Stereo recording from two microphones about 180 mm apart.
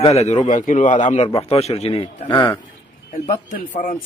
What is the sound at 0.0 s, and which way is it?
A man's voice, 35° left (ahead or behind).